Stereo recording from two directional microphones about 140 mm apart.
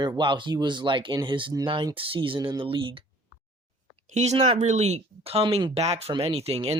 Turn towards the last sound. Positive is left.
turn(degrees=-45)  # may be behind; listen again after turning